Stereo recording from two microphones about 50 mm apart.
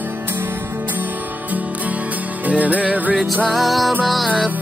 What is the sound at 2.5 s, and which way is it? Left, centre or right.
Music, right.